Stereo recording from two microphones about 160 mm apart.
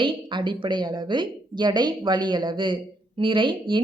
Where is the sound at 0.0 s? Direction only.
30° right (ahead or behind).